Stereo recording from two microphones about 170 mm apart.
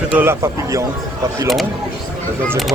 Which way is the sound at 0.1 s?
15° right (ahead or behind).